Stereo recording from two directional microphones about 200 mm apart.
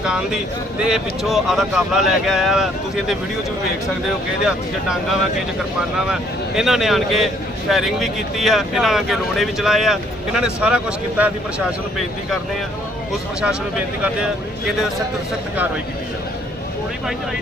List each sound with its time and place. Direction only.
0.0 s speech: 5° right (ahead or behind)
6.6 s speech: centre (ahead or behind)